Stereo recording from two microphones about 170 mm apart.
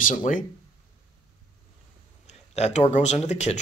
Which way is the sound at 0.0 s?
50° left (ahead or behind).